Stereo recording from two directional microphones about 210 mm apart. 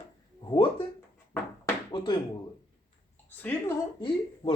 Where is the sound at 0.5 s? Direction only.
25° left (ahead or behind).